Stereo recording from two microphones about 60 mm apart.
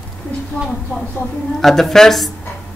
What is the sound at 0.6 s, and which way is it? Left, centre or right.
Speech, left.